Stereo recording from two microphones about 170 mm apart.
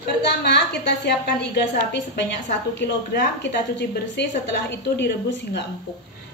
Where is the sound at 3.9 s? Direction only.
80° left.